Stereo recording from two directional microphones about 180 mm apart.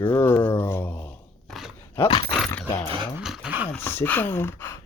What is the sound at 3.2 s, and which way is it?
Dog, 5° right (ahead or behind).